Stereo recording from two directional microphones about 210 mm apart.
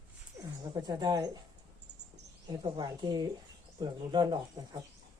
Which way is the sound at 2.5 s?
20° right (ahead or behind).